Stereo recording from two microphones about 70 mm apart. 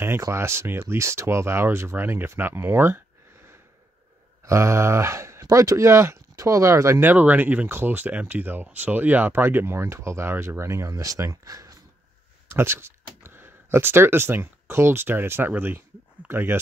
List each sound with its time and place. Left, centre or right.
0.3 s speech: right
4.5 s speech: right
7.1 s speech: right
12.4 s speech: right